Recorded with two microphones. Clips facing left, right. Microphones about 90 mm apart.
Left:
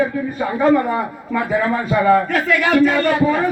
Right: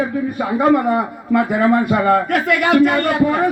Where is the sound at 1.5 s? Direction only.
65° right (ahead or behind).